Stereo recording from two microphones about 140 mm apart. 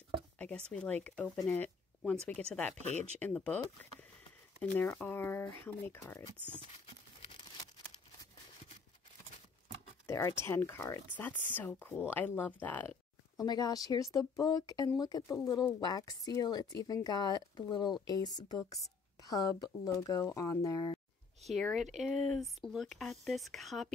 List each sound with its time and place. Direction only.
0.4 s speech: 5° left (ahead or behind)
1.5 s a sound: 5° left (ahead or behind)
2.5 s speech: 5° left (ahead or behind)
10.0 s speech: 20° left (ahead or behind)
13.4 s speech: 30° left (ahead or behind)
21.4 s speech: centre (ahead or behind)